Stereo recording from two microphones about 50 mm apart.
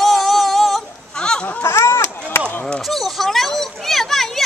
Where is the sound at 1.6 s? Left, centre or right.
Left.